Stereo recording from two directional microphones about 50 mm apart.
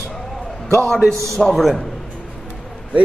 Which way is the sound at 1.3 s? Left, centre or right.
Centre.